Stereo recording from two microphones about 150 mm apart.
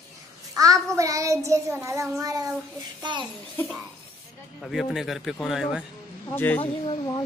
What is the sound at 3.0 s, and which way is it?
Speech, 30° right (ahead or behind).